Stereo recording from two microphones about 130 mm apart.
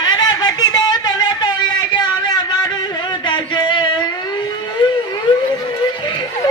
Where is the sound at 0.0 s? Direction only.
35° left (ahead or behind).